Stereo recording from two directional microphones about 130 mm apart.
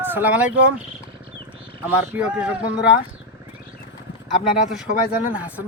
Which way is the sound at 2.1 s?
10° right (ahead or behind).